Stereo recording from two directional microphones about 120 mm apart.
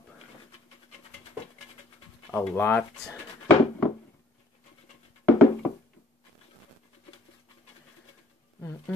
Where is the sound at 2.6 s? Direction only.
10° left (ahead or behind).